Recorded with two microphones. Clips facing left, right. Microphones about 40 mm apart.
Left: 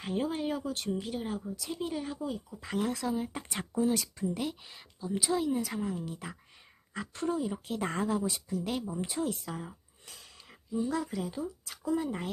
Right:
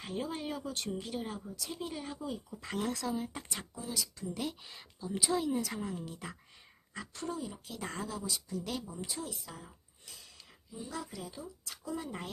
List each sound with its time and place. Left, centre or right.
0.0 s speech: centre
3.5 s speech: left
4.4 s a woman's voice: centre
6.9 s speech: left
8.6 s speech: left
9.0 s speech: left
10.8 s speech: left
11.9 s speech: centre